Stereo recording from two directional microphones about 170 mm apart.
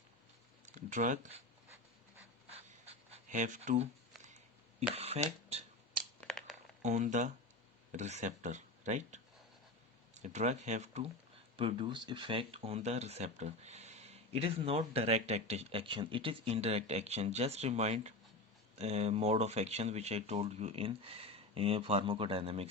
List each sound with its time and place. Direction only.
0.8 s speech: 50° right (ahead or behind)
2.5 s writing: 35° right (ahead or behind)
4.9 s speech: 35° right (ahead or behind)
6.1 s a sound: 5° left (ahead or behind)
6.8 s speech: 45° right (ahead or behind)
10.2 s speech: 45° right (ahead or behind)
11.5 s speech: 30° right (ahead or behind)